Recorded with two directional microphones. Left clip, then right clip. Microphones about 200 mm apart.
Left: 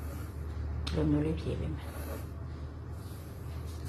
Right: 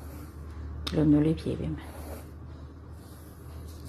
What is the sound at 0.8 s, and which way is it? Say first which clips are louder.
Speech: right 7 dB; 40° right (ahead or behind).